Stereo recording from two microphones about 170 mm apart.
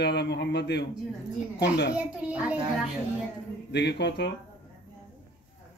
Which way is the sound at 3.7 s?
85° left.